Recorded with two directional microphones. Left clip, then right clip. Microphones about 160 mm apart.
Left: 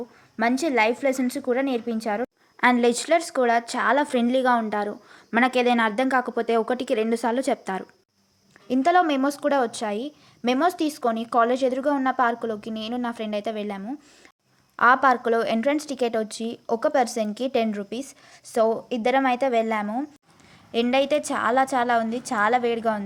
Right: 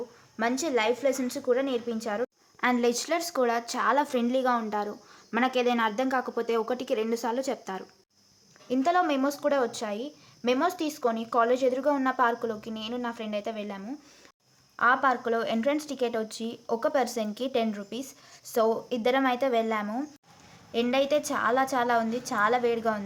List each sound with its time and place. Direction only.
0.3 s a woman's voice: 25° left (ahead or behind)